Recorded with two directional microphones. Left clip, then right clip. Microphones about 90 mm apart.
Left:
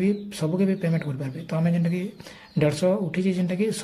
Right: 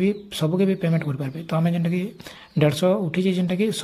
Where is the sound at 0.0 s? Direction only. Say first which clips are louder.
Right 3 dB; 35° right (ahead or behind).